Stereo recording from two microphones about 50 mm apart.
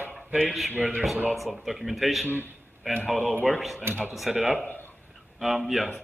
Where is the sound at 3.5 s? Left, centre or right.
Centre.